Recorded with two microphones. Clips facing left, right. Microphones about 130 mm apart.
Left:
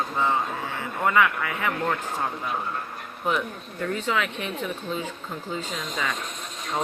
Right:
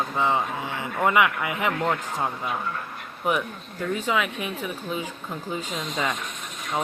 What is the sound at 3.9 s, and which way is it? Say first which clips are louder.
Speech: right 2 dB; 15° right (ahead or behind).